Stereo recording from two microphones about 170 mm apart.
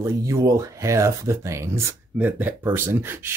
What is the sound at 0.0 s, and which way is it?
Speech, 20° right (ahead or behind).